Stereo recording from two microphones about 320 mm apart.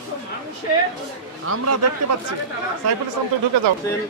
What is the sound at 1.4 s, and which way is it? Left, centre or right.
Speech, right.